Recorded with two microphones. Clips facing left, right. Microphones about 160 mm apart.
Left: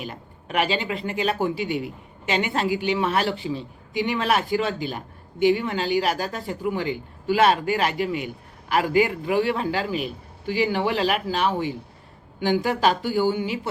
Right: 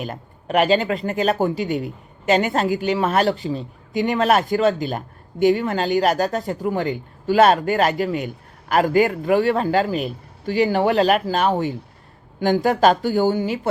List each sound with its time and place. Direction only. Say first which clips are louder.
0.0 s speech: right 5 dB; 45° right (ahead or behind)